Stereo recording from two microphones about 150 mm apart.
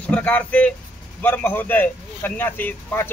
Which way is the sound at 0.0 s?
10° left (ahead or behind).